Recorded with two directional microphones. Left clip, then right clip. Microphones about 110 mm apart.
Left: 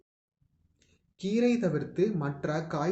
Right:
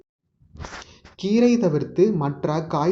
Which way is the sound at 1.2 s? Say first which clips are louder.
Right 9 dB; 40° right (ahead or behind).